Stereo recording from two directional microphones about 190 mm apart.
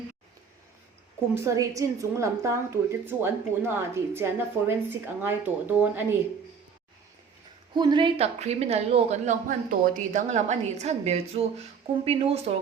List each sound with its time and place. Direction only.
1.4 s a woman's voice: 15° right (ahead or behind)
7.8 s speech: 25° right (ahead or behind)